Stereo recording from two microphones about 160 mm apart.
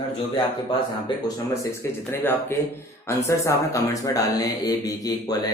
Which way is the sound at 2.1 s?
15° left (ahead or behind).